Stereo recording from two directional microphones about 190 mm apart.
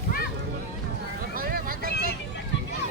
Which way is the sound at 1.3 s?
50° right (ahead or behind).